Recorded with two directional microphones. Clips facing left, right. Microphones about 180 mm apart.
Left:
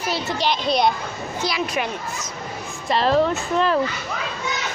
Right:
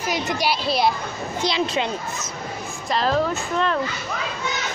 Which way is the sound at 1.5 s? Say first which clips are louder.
Right 2 dB; 25° right (ahead or behind).